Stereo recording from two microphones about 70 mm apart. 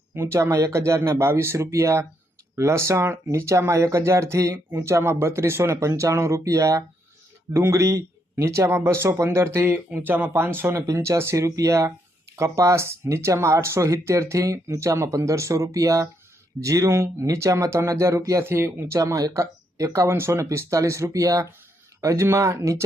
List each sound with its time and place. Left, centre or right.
0.1 s speech: right
10.8 s speech: right
18.9 s speech: right